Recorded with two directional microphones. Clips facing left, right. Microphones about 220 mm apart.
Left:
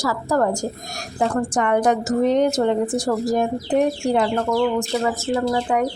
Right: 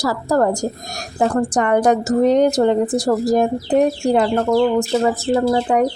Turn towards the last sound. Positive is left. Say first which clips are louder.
# right 4 dB
turn(degrees=-35)  # may be behind; listen again after turning